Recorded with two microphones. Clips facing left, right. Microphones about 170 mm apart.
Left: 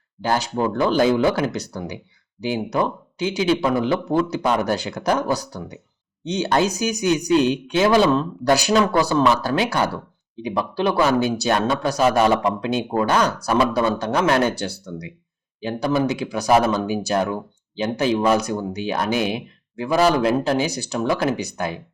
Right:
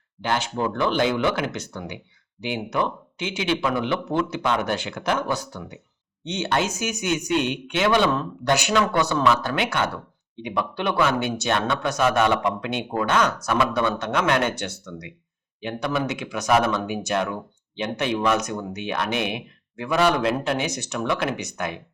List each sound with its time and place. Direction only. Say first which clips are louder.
0.2 s speech: left 3 dB; 35° left (ahead or behind)